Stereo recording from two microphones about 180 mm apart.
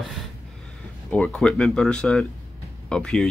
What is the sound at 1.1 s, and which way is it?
Speech, 5° left (ahead or behind).